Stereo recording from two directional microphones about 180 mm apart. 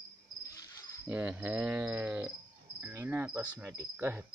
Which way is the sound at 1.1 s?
10° right (ahead or behind).